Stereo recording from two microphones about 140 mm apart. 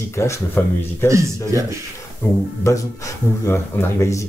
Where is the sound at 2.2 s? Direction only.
15° left (ahead or behind).